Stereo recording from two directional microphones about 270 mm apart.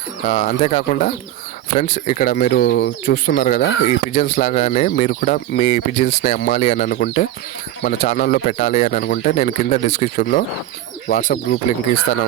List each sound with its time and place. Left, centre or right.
0.3 s speech: left